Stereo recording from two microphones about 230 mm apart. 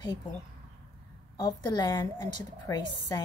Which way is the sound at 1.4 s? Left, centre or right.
Centre.